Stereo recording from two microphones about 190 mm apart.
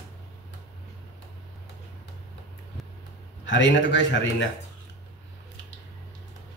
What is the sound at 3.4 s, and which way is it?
A man's voice, 75° left (ahead or behind).